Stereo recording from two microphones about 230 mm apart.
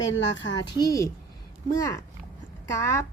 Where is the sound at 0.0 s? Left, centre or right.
Left.